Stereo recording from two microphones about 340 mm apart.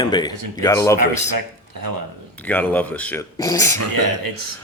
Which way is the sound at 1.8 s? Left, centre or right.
Right.